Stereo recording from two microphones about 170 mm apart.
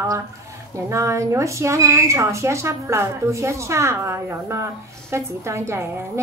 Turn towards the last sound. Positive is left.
turn(degrees=-15)  # may be behind; listen again after turning